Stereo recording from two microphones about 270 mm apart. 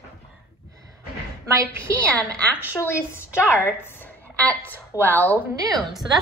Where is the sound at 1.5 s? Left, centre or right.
Centre.